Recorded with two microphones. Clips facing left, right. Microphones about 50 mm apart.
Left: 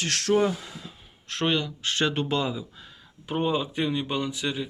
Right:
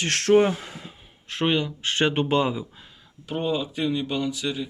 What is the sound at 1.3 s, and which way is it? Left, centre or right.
Speech, centre.